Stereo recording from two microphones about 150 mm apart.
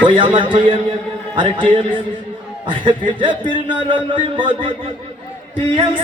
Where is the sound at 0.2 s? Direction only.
35° right (ahead or behind).